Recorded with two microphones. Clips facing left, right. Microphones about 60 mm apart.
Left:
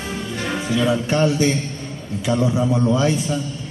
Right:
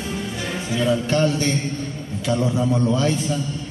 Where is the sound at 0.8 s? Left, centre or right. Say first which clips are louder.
Even; centre.